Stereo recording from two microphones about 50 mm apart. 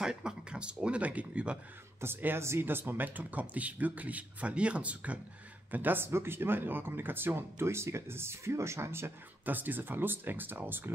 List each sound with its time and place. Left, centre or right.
0.0 s speech: centre
2.2 s speech: right
2.6 s speech: right
5.7 s speech: right
9.5 s speech: right